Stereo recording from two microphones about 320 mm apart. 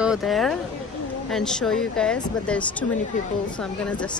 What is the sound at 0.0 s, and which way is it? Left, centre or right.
Speech, centre.